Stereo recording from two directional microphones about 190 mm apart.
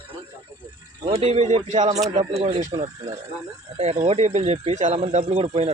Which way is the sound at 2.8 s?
20° right (ahead or behind).